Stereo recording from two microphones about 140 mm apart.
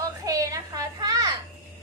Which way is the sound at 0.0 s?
25° right (ahead or behind).